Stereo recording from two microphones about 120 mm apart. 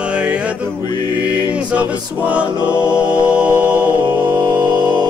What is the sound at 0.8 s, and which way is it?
Music, 40° left (ahead or behind).